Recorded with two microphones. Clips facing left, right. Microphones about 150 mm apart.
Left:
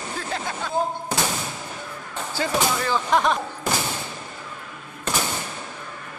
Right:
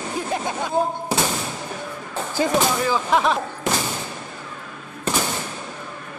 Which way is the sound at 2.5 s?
5° right (ahead or behind).